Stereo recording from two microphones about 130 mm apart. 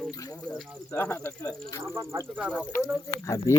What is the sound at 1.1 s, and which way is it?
Speech, 25° left (ahead or behind).